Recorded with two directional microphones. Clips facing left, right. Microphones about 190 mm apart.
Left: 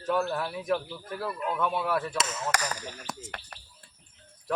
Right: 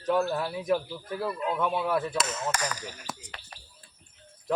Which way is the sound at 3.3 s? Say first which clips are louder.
Left 4 dB; 60° left (ahead or behind).